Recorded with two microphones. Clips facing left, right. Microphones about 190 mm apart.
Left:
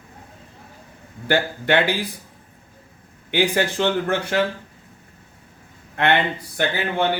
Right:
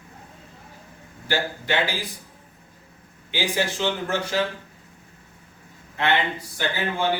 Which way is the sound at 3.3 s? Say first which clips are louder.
Left 5 dB; 60° left (ahead or behind).